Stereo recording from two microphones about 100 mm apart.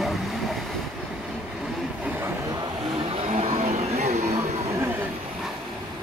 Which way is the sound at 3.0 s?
65° right (ahead or behind).